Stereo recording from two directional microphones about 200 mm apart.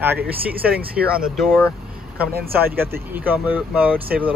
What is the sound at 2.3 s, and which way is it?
Speech, 50° right (ahead or behind).